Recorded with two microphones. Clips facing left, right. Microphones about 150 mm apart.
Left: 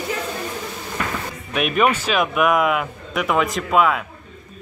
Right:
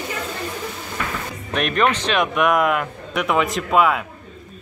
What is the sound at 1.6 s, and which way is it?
Speech, 5° left (ahead or behind).